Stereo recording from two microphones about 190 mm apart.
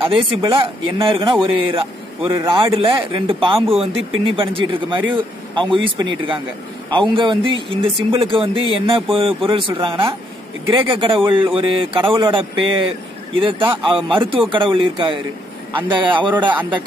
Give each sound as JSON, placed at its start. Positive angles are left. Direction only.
{"t": 0.0, "sound": "speech", "side_deg": -30}